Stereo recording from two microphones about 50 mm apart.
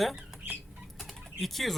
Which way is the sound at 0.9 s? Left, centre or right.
Centre.